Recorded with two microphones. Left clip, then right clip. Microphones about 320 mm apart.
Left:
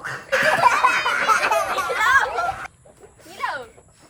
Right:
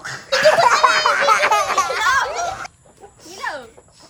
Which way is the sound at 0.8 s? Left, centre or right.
Centre.